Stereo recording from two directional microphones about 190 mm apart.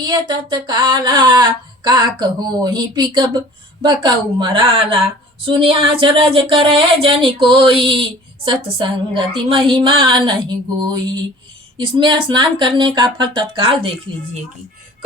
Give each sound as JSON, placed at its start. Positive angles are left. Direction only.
{"t": 0.0, "sound": "speech", "side_deg": -20}